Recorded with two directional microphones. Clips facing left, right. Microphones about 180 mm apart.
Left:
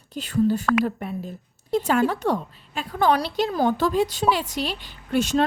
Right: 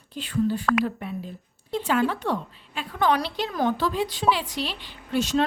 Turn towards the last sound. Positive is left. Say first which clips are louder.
# left 2 dB
turn(degrees=50)  # may be behind; listen again after turning